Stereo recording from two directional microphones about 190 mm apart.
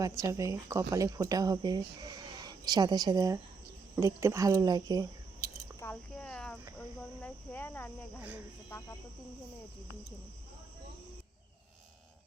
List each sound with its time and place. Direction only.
0.0 s speech: 15° right (ahead or behind)
5.8 s cricket: 5° left (ahead or behind)